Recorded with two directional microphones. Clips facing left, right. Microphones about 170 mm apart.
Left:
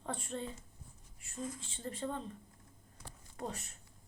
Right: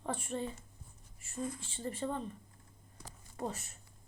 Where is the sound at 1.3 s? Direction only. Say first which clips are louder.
Right 3 dB; 60° right (ahead or behind).